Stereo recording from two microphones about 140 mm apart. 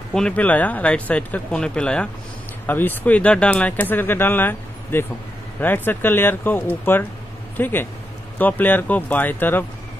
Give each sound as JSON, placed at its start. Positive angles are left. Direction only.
{"t": 0.1, "sound": "speech", "side_deg": 10}